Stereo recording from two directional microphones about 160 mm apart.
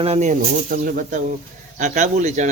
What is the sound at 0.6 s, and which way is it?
Speech, 65° right (ahead or behind).